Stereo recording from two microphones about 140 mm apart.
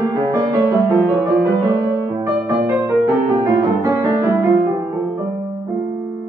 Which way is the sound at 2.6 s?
20° right (ahead or behind).